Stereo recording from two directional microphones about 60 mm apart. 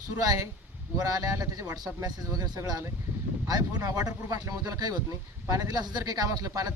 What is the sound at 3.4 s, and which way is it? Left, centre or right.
Speech, right.